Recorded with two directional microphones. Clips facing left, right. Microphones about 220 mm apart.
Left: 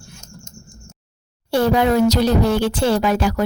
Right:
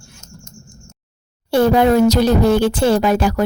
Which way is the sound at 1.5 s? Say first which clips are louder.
Right 3 dB; 50° right (ahead or behind).